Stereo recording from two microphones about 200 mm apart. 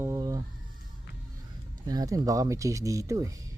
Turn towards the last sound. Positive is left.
turn(degrees=-15)  # may be behind; listen again after turning